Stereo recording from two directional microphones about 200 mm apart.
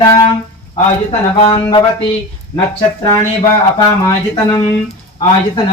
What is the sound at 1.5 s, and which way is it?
Speech, 15° left (ahead or behind).